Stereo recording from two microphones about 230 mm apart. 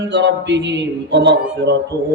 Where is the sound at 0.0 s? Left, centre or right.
Right.